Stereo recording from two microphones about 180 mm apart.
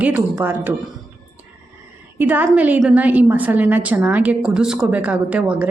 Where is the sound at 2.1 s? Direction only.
10° right (ahead or behind).